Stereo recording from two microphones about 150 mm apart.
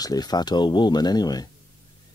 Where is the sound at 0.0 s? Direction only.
25° left (ahead or behind).